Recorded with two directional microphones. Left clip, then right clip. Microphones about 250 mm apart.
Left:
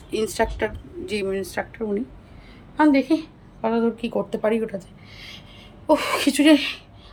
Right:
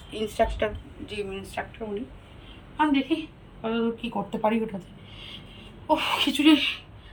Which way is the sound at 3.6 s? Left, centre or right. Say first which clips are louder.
Left 6 dB; left.